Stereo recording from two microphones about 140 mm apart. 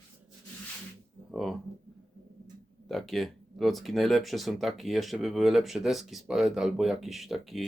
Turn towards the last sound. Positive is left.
turn(degrees=0)  # may be behind; listen again after turning